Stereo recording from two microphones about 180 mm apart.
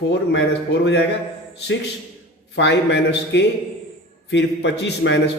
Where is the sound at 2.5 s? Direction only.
75° left (ahead or behind).